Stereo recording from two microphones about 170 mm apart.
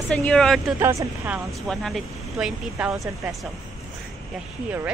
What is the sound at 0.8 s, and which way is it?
Speech, 15° right (ahead or behind).